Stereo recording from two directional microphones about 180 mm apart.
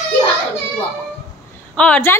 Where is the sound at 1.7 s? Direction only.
5° left (ahead or behind).